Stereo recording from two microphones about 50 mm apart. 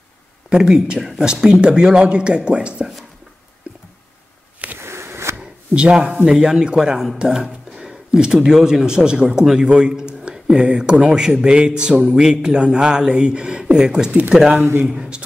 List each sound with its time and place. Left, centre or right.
0.5 s speech: centre
4.8 s a sound: right
5.8 s speech: centre